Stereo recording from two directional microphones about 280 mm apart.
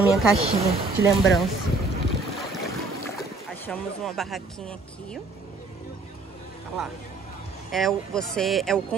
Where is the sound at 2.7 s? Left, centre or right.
Centre.